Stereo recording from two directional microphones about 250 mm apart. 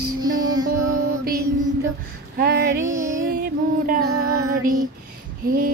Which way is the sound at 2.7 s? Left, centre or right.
Centre.